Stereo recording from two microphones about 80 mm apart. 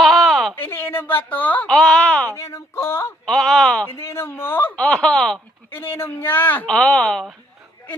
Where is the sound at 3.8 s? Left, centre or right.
Left.